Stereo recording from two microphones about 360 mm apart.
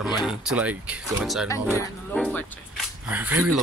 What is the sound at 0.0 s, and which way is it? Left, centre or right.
Speech, centre.